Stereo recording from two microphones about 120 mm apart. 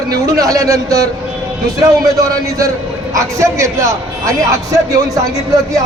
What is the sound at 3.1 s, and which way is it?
A man's voice, 25° right (ahead or behind).